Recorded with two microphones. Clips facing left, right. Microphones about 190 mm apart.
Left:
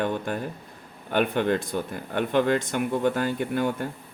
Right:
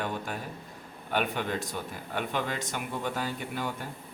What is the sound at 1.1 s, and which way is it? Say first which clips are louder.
Speech: left 7 dB; 55° left (ahead or behind).